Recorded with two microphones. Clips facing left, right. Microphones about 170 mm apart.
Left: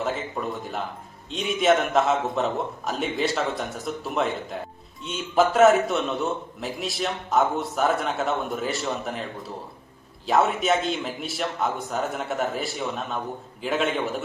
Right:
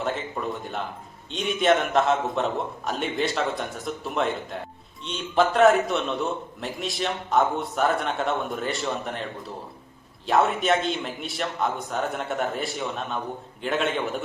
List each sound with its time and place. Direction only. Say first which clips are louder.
0.0 s a man's voice: even; centre (ahead or behind)
10.2 s a man's voice: even; centre (ahead or behind)